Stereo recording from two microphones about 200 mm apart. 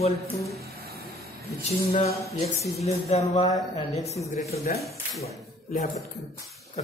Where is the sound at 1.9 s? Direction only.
30° left (ahead or behind).